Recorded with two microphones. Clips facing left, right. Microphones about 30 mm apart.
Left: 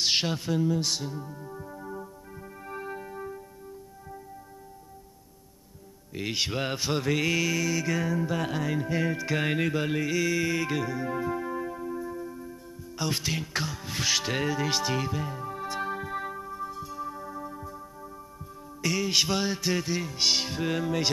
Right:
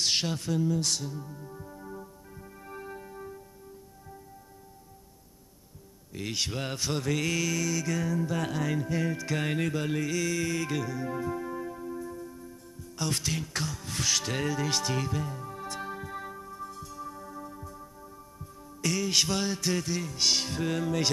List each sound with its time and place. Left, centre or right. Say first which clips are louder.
0.0 s speech: left 2 dB; centre
2.6 s music: left 5 dB; centre
6.1 s speech: left 3 dB; centre
18.8 s music: left 1 dB; centre